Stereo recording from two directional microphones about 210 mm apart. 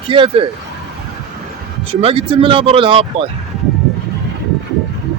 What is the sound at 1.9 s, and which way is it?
A man's voice, 25° right (ahead or behind).